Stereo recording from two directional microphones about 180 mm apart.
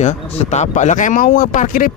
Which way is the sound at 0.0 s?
40° left (ahead or behind).